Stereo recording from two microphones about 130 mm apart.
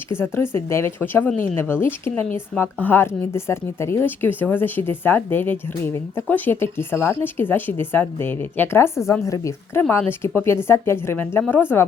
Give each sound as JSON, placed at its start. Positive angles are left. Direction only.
{"t": 0.1, "sound": "speech", "side_deg": 20}